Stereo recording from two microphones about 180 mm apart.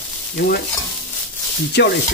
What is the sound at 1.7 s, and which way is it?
Sizzle, 65° left (ahead or behind).